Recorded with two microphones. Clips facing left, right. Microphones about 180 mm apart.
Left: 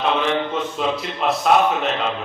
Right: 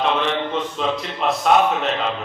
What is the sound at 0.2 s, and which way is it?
A man's voice, 5° left (ahead or behind).